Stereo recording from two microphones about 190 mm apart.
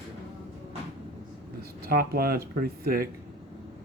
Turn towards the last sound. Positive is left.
turn(degrees=-55)  # may be behind; listen again after turning